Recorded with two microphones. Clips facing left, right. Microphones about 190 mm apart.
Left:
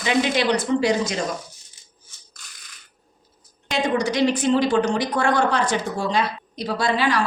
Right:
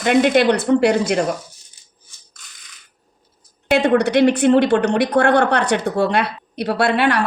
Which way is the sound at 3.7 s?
65° right (ahead or behind).